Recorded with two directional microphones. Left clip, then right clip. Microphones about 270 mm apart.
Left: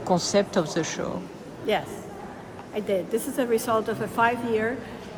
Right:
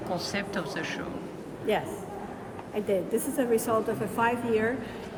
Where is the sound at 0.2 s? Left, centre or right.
Centre.